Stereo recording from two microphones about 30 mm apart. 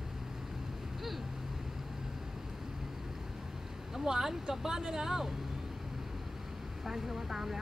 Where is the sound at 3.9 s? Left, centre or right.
Centre.